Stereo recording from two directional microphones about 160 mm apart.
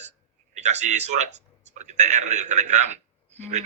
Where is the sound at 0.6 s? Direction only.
45° right (ahead or behind).